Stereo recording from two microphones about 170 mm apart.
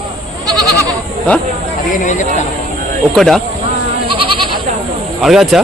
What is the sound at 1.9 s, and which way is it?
Speech, 50° left (ahead or behind).